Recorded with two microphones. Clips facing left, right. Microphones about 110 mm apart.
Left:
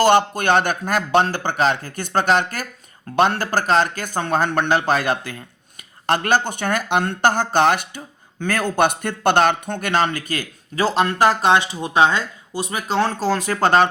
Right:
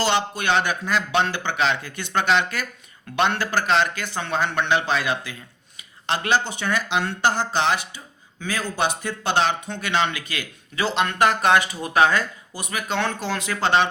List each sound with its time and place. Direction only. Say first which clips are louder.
0.0 s speech: left 7 dB; 50° left (ahead or behind)